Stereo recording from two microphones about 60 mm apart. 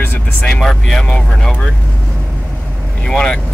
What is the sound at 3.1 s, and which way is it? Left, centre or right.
Speech, centre.